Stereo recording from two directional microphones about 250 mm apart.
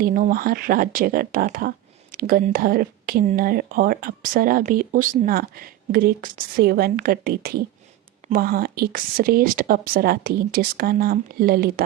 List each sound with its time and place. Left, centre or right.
0.0 s speech: right